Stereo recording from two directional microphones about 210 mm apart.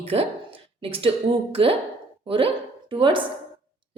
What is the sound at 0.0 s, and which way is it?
A woman's voice, 25° right (ahead or behind).